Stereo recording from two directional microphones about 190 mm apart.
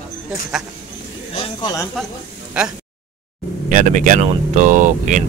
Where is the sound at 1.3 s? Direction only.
20° left (ahead or behind).